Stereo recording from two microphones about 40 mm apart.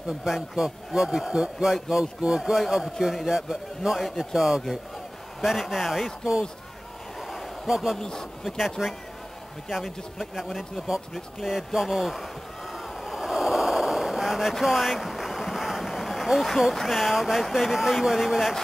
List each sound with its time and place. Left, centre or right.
0.2 s a man's voice: centre
7.6 s a man's voice: centre
8.0 s a man's voice: centre
8.8 s a man's voice: centre
11.1 s a man's voice: centre
11.5 s speech: centre
12.7 s a sound: centre
15.9 s vehicle: centre
16.7 s speech: centre